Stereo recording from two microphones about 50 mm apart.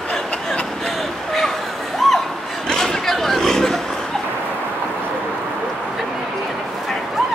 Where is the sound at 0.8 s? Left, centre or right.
Centre.